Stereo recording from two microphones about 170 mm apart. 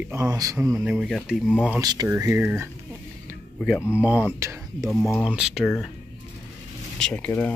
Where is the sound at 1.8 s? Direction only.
25° right (ahead or behind).